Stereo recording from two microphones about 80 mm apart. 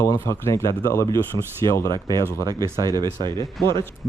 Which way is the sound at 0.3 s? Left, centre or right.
Left.